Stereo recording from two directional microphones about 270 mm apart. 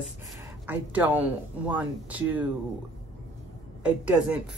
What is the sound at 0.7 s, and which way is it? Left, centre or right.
Speech, centre.